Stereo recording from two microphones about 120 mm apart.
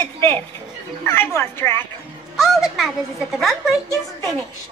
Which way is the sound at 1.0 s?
20° left (ahead or behind).